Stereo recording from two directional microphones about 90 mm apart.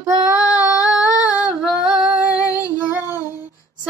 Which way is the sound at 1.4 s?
5° right (ahead or behind).